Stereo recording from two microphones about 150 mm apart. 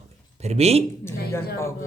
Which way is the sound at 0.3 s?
45° right (ahead or behind).